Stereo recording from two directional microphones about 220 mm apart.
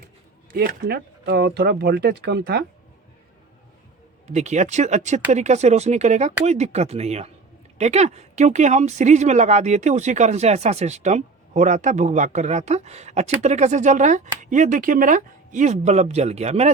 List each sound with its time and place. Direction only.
0.5 s speech: 45° right (ahead or behind)
4.3 s speech: 30° right (ahead or behind)